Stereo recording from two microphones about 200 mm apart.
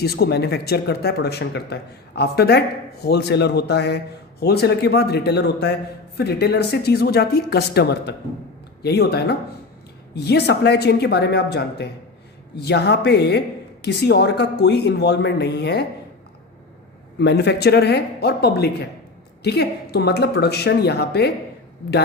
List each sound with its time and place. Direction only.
0.0 s speech: 50° left (ahead or behind)
17.2 s speech: 60° left (ahead or behind)